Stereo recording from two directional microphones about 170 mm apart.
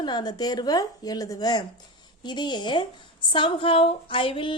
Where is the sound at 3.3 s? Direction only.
30° left (ahead or behind).